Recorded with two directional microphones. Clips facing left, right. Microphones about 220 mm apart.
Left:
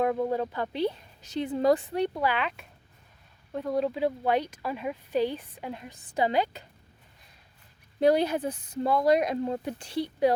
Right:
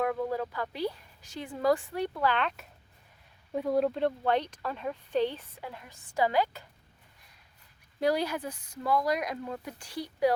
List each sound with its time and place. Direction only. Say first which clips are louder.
0.0 s speech: left 4 dB; 25° left (ahead or behind)
7.9 s speech: left 5 dB; 25° left (ahead or behind)